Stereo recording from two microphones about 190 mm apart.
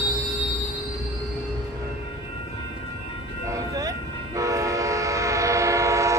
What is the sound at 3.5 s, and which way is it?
Train, 15° right (ahead or behind).